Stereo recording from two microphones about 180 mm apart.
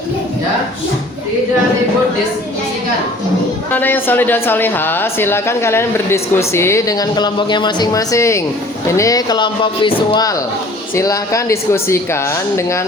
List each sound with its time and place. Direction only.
3.7 s a woman's voice: 10° left (ahead or behind)